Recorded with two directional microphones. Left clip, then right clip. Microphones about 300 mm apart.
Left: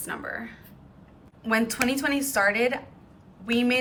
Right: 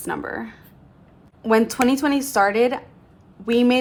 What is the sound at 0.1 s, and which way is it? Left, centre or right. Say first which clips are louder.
A woman's voice: right 6 dB; centre.